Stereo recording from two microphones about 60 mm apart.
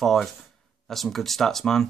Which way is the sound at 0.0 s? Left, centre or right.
Centre.